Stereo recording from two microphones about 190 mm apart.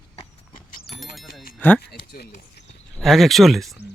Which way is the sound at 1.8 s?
55° left (ahead or behind).